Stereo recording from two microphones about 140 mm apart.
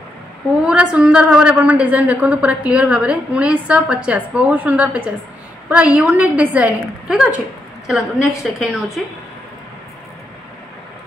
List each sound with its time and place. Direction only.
0.7 s a woman's voice: 5° right (ahead or behind)